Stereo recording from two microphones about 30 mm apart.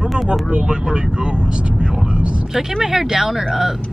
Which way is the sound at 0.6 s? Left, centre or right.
Right.